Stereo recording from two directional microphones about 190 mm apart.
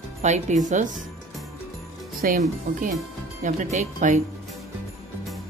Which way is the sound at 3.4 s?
40° right (ahead or behind).